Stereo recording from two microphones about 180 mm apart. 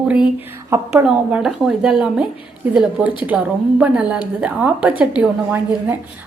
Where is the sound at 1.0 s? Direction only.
5° right (ahead or behind).